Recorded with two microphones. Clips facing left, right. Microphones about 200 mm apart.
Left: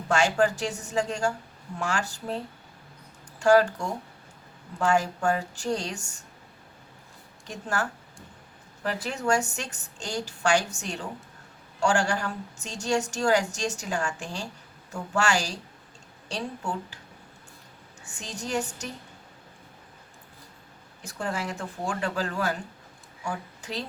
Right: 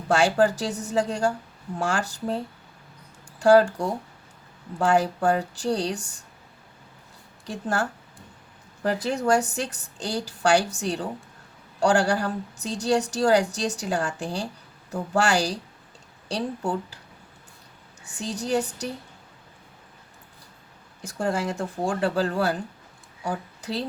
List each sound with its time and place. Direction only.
0.1 s a woman's voice: 35° right (ahead or behind)
3.4 s a woman's voice: 35° right (ahead or behind)
9.0 s a woman's voice: 35° right (ahead or behind)
18.0 s a woman's voice: 35° right (ahead or behind)
21.2 s a woman's voice: 35° right (ahead or behind)